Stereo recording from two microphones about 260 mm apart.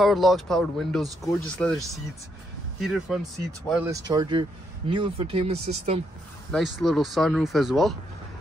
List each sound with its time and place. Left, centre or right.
0.0 s speech: centre
2.8 s speech: centre
3.9 s speech: centre
6.5 s speech: centre